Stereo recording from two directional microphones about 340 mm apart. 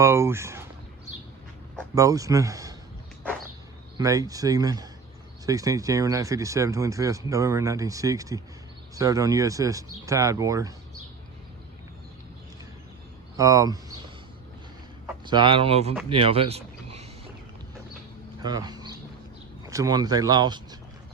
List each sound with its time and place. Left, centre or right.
0.0 s speech: centre
2.0 s speech: centre
3.9 s speech: centre
13.3 s speech: centre
15.0 s speech: centre
18.4 s a sound: centre
19.6 s speech: centre